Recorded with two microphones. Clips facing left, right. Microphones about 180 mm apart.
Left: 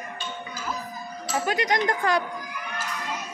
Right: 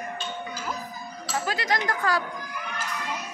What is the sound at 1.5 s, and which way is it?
Speech, 20° left (ahead or behind).